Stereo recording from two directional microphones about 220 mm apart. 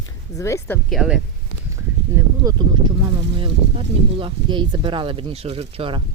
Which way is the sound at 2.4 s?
20° right (ahead or behind).